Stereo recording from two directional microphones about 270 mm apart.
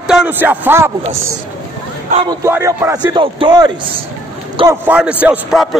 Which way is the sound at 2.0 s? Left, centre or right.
Right.